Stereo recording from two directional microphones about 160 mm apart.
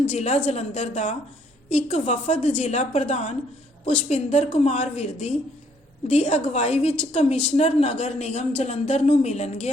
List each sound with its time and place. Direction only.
0.1 s a woman's voice: 45° left (ahead or behind)